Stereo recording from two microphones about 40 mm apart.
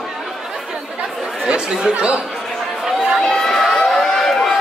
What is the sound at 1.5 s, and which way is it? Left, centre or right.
Speech, right.